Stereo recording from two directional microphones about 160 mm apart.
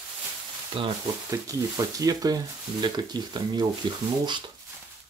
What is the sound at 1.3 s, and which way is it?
Speech, 20° right (ahead or behind).